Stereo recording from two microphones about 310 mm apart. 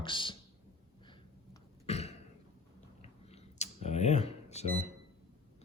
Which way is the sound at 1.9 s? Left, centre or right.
Centre.